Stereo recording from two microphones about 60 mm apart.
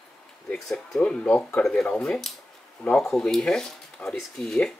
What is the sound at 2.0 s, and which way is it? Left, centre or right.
Speech, centre.